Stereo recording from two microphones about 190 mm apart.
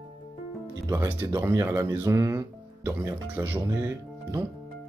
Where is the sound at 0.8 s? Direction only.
15° right (ahead or behind).